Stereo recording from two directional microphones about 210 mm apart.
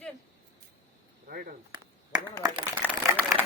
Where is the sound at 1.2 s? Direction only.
45° right (ahead or behind).